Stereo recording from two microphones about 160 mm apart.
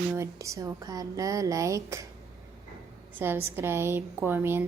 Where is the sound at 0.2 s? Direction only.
20° right (ahead or behind).